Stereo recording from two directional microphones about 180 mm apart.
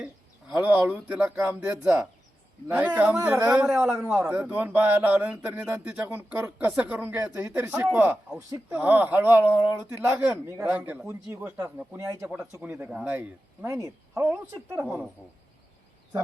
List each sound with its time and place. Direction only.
0.0 s speech: 5° right (ahead or behind)